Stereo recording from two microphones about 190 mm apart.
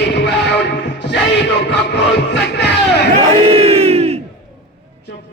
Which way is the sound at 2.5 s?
60° left (ahead or behind).